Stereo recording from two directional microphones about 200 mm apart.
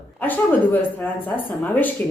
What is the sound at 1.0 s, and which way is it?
Speech, 10° left (ahead or behind).